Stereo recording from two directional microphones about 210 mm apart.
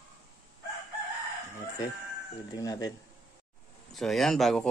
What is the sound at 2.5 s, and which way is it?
Speech, 15° left (ahead or behind).